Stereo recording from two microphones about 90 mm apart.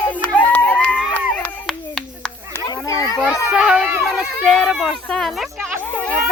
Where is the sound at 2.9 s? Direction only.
45° left (ahead or behind).